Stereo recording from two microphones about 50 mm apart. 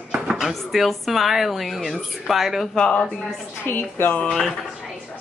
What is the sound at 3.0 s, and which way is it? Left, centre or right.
Speech, left.